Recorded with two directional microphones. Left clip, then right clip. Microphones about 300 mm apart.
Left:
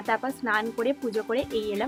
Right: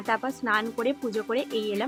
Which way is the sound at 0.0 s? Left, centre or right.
Centre.